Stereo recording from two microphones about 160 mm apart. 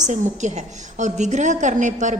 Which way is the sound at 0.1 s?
45° right (ahead or behind).